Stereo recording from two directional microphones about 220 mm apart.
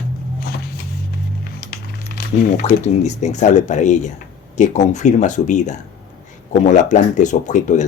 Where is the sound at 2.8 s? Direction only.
30° left (ahead or behind).